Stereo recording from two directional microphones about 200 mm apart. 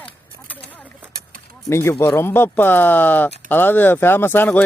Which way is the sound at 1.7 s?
15° left (ahead or behind).